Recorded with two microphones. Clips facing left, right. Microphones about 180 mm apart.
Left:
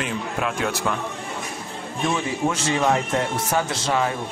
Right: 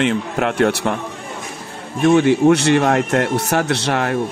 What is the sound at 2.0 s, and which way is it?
Speech, 70° right (ahead or behind).